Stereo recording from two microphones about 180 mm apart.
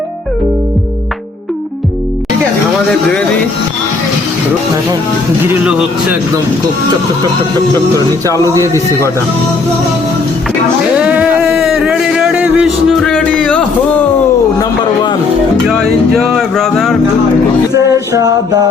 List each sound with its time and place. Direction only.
5.5 s speech: 10° right (ahead or behind)
8.5 s speech: 15° right (ahead or behind)
10.9 s a sound: 5° right (ahead or behind)
15.6 s music: centre (ahead or behind)
16.1 s speech: centre (ahead or behind)
17.9 s music: 20° right (ahead or behind)